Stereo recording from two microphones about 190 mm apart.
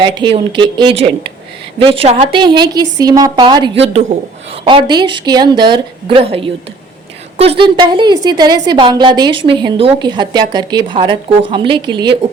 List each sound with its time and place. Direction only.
0.0 s a woman's voice: 25° right (ahead or behind)
7.6 s a woman's voice: 25° right (ahead or behind)